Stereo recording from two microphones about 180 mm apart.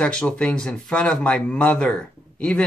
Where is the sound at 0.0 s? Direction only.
5° left (ahead or behind).